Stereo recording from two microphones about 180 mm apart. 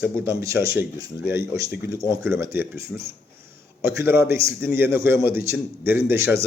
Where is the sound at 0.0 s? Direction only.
15° right (ahead or behind).